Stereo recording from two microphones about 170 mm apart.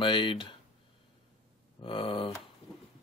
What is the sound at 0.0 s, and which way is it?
Speech, 30° left (ahead or behind).